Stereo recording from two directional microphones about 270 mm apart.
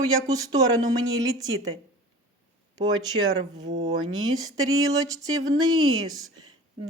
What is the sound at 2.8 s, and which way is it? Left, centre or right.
Speech, centre.